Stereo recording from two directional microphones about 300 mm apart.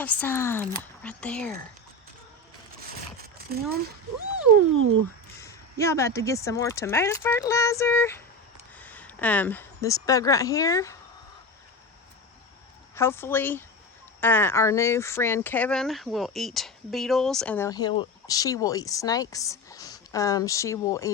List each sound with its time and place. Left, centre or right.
0.0 s speech: centre
3.3 s speech: right
5.4 s speech: centre
13.0 s speech: centre